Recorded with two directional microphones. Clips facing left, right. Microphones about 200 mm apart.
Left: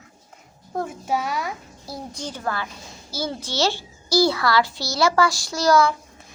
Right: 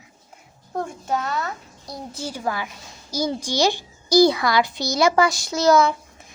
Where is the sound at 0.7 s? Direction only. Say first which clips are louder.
Even; 5° left (ahead or behind); by 5.9 s 20° right (ahead or behind).